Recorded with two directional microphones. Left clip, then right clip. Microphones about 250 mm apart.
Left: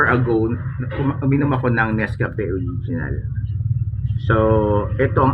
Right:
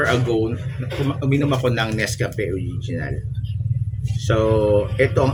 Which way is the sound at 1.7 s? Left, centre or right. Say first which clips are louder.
Left 2 dB; right.